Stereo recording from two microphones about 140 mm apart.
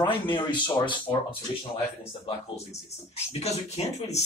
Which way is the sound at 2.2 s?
50° left (ahead or behind).